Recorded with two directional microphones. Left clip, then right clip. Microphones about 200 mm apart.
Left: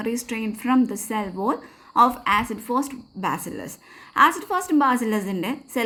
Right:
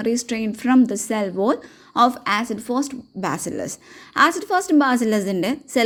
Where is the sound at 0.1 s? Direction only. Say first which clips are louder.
Right 5 dB; 30° right (ahead or behind).